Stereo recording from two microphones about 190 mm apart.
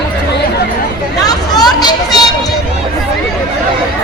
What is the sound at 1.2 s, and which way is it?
Vehicle, 20° left (ahead or behind).